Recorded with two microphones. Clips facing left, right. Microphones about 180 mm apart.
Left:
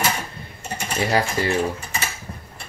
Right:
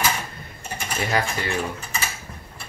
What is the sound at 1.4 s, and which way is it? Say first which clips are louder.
Speech: left 6 dB; 35° left (ahead or behind).